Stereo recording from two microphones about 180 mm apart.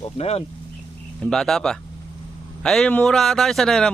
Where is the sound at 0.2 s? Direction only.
35° left (ahead or behind).